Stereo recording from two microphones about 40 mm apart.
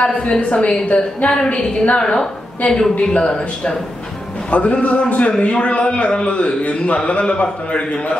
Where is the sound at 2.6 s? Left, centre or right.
Left.